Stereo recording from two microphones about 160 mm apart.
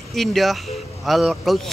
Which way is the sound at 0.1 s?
Centre (ahead or behind).